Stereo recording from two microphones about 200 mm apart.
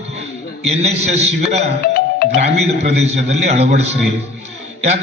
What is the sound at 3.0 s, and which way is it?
A man's voice, 30° right (ahead or behind).